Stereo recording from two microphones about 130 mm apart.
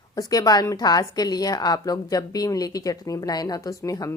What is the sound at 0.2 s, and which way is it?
A woman's voice, 30° left (ahead or behind).